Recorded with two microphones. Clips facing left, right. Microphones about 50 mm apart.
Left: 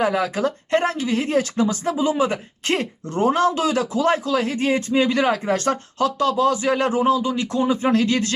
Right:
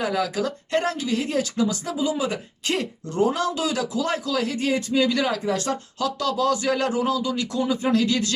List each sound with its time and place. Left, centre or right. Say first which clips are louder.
0.0 s speech: left 4 dB; left
6.1 s speech: left 3 dB; left